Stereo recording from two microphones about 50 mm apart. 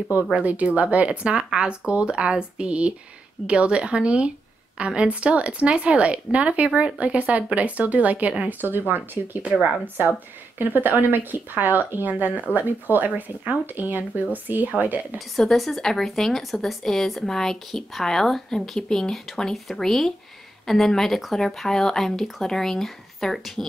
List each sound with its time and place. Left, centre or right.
0.4 s speech: right
10.6 s a woman's voice: right
15.1 s a woman's voice: centre